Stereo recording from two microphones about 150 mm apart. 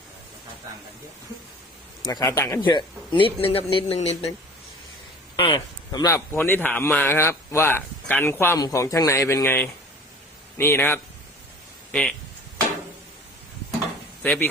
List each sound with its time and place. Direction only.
2.0 s speech: 20° left (ahead or behind)
2.6 s speech: 30° left (ahead or behind)
5.4 s a man's voice: 35° left (ahead or behind); by 12.1 s 5° left (ahead or behind)
14.2 s speech: 10° left (ahead or behind)